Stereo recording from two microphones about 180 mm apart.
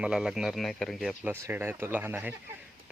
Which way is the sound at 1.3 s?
15° right (ahead or behind).